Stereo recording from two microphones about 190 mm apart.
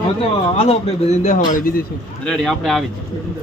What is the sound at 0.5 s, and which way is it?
Speech, 30° left (ahead or behind).